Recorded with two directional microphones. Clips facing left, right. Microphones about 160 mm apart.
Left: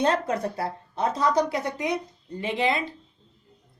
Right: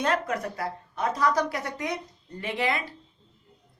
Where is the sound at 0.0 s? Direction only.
30° left (ahead or behind).